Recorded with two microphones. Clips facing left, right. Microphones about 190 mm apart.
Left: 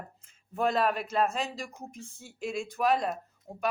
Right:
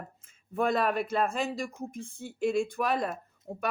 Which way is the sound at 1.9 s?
55° right (ahead or behind).